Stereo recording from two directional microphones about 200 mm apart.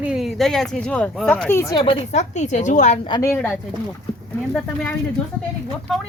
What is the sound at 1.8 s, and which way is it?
A woman's voice, 30° left (ahead or behind).